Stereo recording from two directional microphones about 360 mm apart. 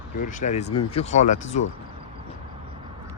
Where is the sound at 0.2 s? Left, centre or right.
Left.